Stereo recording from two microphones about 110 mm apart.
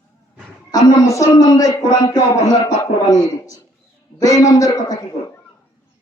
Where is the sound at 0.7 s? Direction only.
30° left (ahead or behind).